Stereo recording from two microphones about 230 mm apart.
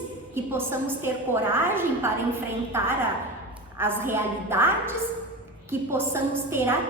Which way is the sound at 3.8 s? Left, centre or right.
Centre.